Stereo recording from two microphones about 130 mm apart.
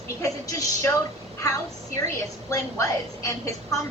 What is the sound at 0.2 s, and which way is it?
Speech, 25° left (ahead or behind).